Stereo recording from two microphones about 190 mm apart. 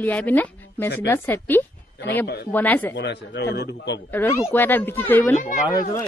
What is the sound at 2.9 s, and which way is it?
A man's voice, 65° left (ahead or behind).